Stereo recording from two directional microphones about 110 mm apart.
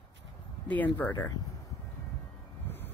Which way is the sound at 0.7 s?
15° left (ahead or behind).